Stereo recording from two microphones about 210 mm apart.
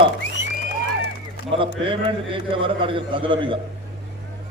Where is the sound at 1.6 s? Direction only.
25° right (ahead or behind).